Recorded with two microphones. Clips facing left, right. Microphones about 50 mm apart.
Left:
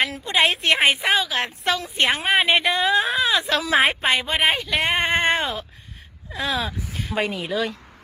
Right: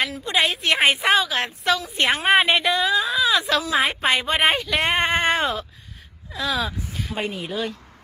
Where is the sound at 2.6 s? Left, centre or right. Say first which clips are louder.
Left 1 dB; left.